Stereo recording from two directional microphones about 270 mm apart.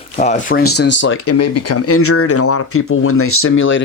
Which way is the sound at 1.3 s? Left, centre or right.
Left.